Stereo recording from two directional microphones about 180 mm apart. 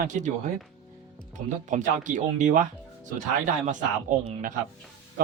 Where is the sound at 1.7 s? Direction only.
45° right (ahead or behind).